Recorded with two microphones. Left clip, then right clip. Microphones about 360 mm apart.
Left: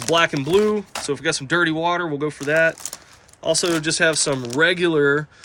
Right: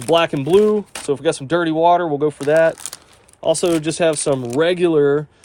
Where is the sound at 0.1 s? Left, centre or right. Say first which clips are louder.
Right 3 dB; centre.